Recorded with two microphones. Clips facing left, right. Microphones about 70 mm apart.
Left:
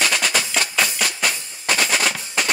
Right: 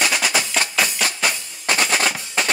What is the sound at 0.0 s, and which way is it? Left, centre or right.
Music, centre.